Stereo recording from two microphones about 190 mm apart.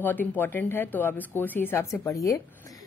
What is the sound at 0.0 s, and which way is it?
Speech, 10° left (ahead or behind).